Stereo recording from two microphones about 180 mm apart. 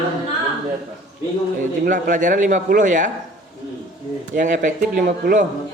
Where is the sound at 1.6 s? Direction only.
50° right (ahead or behind).